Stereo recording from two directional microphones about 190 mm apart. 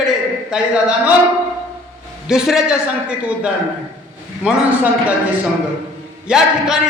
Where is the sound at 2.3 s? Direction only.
5° right (ahead or behind).